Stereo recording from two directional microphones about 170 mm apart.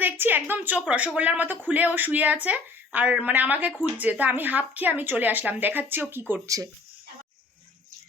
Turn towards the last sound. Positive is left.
turn(degrees=-20)  # may be behind; listen again after turning